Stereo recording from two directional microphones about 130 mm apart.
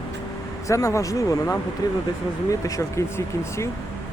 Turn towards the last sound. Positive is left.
turn(degrees=25)  # may be behind; listen again after turning